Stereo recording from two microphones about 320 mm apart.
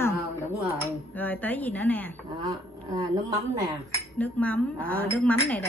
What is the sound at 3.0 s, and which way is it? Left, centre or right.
Speech, centre.